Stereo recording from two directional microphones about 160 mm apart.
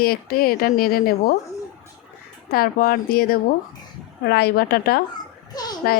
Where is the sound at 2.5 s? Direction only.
65° left (ahead or behind).